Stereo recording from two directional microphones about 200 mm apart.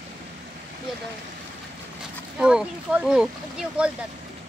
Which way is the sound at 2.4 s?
5° right (ahead or behind).